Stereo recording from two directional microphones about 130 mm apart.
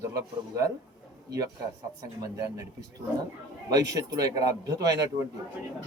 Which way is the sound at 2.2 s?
25° right (ahead or behind).